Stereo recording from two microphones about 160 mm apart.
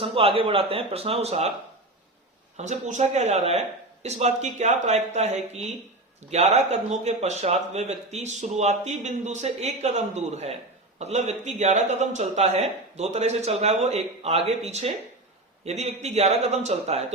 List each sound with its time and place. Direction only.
0.0 s speech: 35° right (ahead or behind)
2.6 s speech: 50° right (ahead or behind)